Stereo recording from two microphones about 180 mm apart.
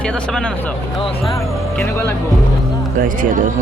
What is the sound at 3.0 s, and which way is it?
Speech, 50° right (ahead or behind).